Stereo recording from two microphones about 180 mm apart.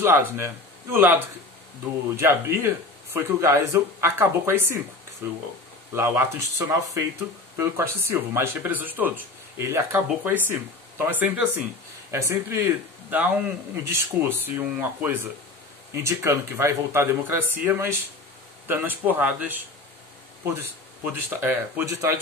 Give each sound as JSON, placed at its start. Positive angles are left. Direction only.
{"t": 0.0, "sound": "a man's voice", "side_deg": -15}